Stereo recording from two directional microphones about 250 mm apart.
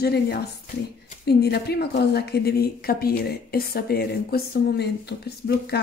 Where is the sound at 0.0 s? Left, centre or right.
Left.